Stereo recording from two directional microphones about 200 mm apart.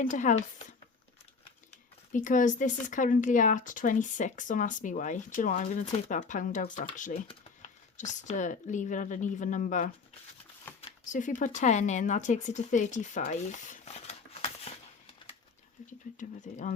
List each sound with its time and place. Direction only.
0.0 s speech: 40° left (ahead or behind)
2.1 s speech: 40° left (ahead or behind)
16.1 s speech: 40° left (ahead or behind)